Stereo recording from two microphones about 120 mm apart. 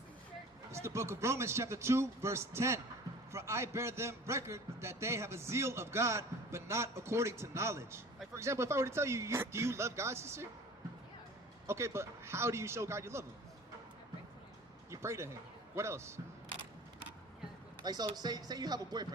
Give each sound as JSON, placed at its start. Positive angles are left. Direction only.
{"t": 0.7, "sound": "a man's voice", "side_deg": -25}
{"t": 11.6, "sound": "a man's voice", "side_deg": -20}
{"t": 14.8, "sound": "a sound", "side_deg": -25}
{"t": 15.7, "sound": "a man's voice", "side_deg": -25}
{"t": 17.8, "sound": "speech", "side_deg": -35}